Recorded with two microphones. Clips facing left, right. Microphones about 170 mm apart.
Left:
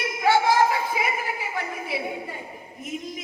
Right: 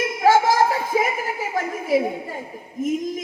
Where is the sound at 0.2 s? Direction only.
40° right (ahead or behind).